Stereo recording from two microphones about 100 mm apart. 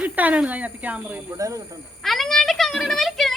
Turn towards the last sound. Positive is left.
turn(degrees=0)  # may be behind; listen again after turning